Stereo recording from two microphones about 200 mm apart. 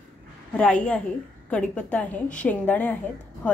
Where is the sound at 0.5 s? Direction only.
5° left (ahead or behind).